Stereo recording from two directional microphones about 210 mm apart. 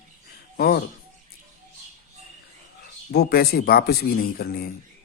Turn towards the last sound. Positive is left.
turn(degrees=45)  # may be behind; listen again after turning